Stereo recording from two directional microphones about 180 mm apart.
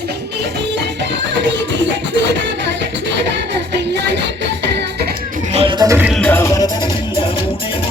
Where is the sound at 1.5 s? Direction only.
85° right.